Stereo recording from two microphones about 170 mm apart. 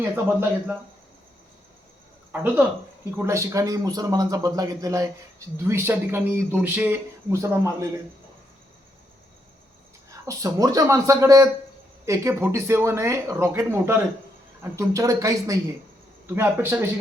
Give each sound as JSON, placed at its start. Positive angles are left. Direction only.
{"t": 0.0, "sound": "speech", "side_deg": -10}
{"t": 2.3, "sound": "a man's voice", "side_deg": -10}
{"t": 10.2, "sound": "a man's voice", "side_deg": -20}